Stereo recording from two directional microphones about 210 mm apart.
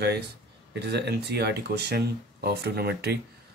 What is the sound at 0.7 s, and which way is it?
Speech, 55° right (ahead or behind).